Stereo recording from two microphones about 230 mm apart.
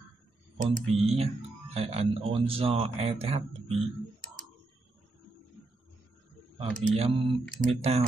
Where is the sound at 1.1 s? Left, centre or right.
Right.